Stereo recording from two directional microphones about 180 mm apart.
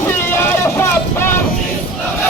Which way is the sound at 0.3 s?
15° left (ahead or behind).